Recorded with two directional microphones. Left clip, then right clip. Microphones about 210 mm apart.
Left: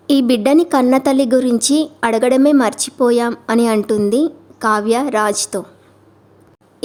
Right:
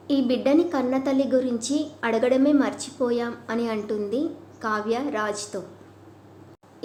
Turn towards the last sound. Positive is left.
turn(degrees=55)  # may be behind; listen again after turning